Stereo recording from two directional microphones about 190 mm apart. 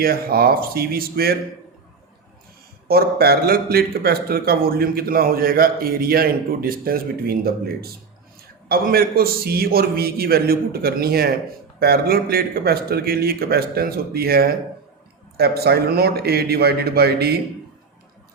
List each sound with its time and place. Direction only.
0.0 s speech: 50° right (ahead or behind)
2.8 s a man's voice: 55° right (ahead or behind)